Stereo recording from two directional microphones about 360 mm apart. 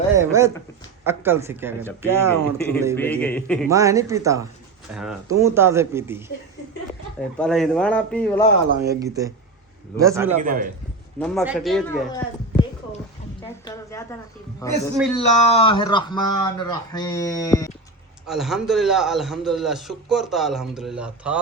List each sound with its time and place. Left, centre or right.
0.2 s speech: centre
2.6 s a man's voice: centre
3.7 s speech: centre
7.3 s a man's voice: centre
8.8 s speech: centre
10.3 s a man's voice: right
11.2 s a man's voice: centre
14.6 s speech: centre
18.3 s a man's voice: centre